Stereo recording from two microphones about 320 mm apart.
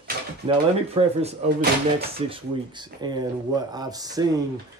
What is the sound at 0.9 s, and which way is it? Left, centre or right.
A child's voice, right.